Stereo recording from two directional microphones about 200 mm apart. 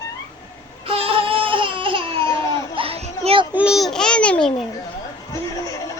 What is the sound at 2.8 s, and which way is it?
Children playing, 30° right (ahead or behind).